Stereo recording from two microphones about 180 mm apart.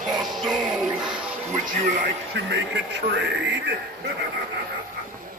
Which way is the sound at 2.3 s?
70° right (ahead or behind).